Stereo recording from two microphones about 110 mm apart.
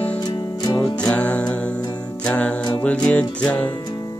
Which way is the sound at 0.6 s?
35° left (ahead or behind).